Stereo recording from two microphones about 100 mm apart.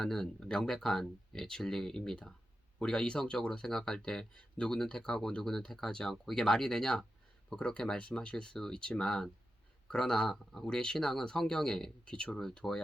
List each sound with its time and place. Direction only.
0.0 s speech: 5° left (ahead or behind)